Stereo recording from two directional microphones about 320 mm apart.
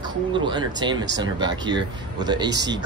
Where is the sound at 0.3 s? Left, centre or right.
Centre.